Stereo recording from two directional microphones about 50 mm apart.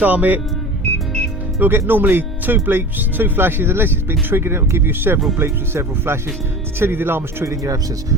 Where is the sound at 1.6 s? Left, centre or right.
Right.